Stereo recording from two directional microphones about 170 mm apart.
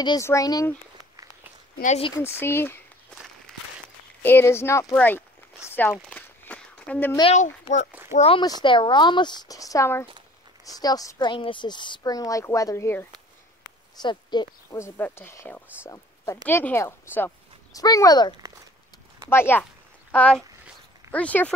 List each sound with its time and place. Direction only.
0.0 s speech: 20° left (ahead or behind)
1.1 s a sound: 20° right (ahead or behind)
2.1 s speech: 15° left (ahead or behind)
3.5 s walk: 5° left (ahead or behind)
4.2 s speech: 10° left (ahead or behind)
5.7 s a sound: 10° left (ahead or behind)
7.6 s a child's voice: 45° left (ahead or behind)
8.4 s speech: 25° left (ahead or behind)
14.0 s speech: 25° left (ahead or behind)
19.3 s speech: 15° left (ahead or behind)